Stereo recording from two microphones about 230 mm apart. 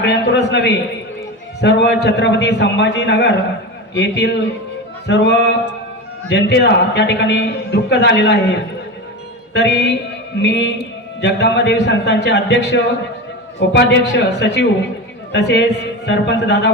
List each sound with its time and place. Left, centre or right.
0.0 s a man's voice: left
9.5 s a man's voice: left